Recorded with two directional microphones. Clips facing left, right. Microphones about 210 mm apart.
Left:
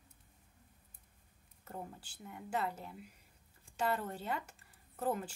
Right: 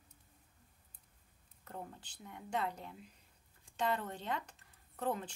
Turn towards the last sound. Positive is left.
turn(degrees=5)  # may be behind; listen again after turning